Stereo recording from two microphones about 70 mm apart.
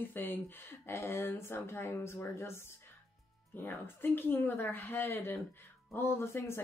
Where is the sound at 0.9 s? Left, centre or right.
Left.